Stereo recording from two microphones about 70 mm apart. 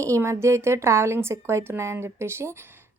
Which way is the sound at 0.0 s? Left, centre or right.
Right.